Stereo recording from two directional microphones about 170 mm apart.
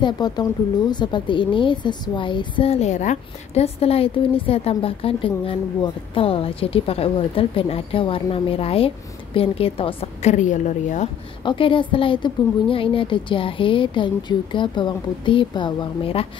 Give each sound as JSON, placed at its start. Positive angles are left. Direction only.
{"t": 0.0, "sound": "a woman's voice", "side_deg": 25}
{"t": 11.4, "sound": "a woman's voice", "side_deg": 30}